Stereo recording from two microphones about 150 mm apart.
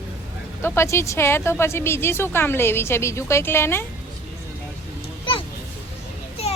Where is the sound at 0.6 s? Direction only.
15° left (ahead or behind).